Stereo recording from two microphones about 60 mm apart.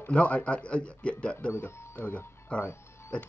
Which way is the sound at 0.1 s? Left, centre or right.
Left.